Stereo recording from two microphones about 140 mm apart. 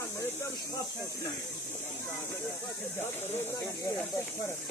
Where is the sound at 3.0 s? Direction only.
15° left (ahead or behind).